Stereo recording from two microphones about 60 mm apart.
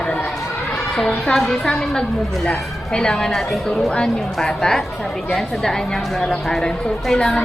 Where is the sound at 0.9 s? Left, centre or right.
Centre.